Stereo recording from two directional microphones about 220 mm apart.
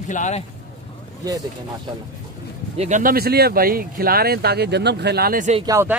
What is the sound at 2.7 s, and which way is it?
Speech, 30° right (ahead or behind).